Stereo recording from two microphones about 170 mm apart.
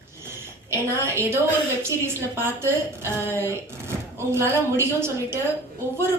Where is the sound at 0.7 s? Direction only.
15° right (ahead or behind).